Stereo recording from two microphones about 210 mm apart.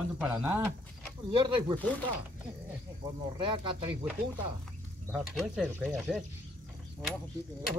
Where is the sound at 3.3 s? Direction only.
20° right (ahead or behind).